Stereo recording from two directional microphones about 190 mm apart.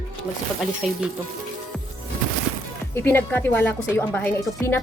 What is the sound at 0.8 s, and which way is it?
Speech, centre (ahead or behind).